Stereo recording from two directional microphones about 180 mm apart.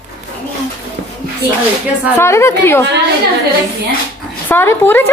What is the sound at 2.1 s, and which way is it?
Speech, 15° left (ahead or behind).